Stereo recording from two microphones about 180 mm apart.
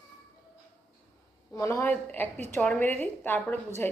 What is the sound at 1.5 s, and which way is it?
A woman's voice, 15° left (ahead or behind).